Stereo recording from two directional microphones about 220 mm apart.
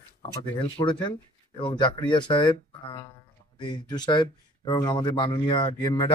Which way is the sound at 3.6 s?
20° left (ahead or behind).